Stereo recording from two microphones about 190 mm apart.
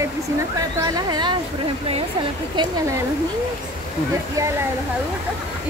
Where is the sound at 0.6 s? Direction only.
20° right (ahead or behind).